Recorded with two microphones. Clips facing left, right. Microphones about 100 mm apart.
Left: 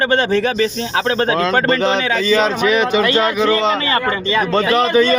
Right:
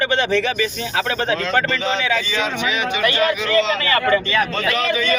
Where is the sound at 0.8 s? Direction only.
30° left (ahead or behind).